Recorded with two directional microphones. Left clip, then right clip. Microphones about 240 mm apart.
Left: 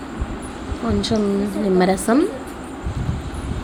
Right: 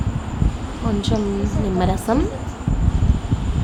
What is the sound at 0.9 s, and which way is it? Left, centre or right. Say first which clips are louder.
A woman's voice: left 2 dB; centre.